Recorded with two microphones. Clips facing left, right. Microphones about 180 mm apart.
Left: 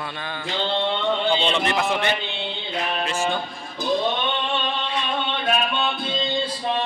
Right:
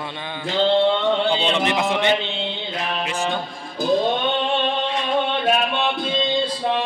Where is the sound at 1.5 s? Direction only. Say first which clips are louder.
Right 2 dB; 15° right (ahead or behind).